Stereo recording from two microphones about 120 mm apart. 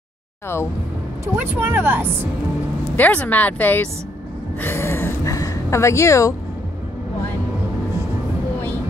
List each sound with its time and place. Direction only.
1.2 s a woman's voice: 15° right (ahead or behind)
3.0 s a woman's voice: 10° left (ahead or behind)